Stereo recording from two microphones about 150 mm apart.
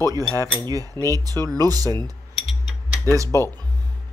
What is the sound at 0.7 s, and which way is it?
A man's voice, 25° right (ahead or behind).